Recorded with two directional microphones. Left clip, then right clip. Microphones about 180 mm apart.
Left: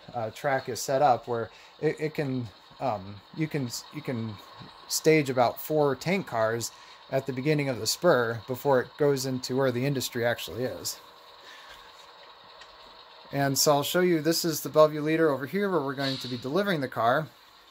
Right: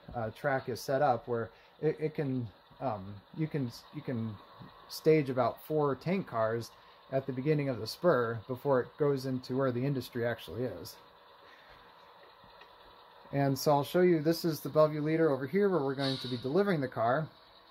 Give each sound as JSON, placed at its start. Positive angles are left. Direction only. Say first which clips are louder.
{"t": 0.1, "sound": "speech", "louder": "left 5 dB", "side_deg": 15}
{"t": 13.7, "sound": "speech", "louder": "left 2 dB", "side_deg": 15}